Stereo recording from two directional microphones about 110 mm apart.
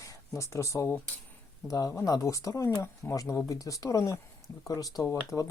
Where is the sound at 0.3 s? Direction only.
25° left (ahead or behind).